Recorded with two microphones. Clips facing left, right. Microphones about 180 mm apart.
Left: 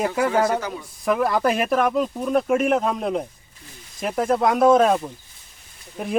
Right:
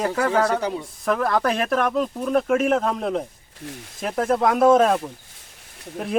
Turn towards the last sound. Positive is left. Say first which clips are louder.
# even
turn(degrees=5)  # may be behind; listen again after turning